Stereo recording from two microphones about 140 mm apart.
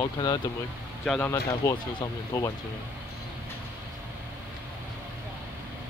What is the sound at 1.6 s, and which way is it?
Speech, 20° left (ahead or behind).